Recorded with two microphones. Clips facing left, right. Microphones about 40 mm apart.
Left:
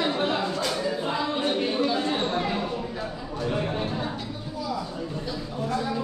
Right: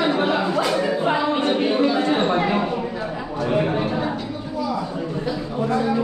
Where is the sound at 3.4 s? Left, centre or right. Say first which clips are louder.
Right 7 dB; right.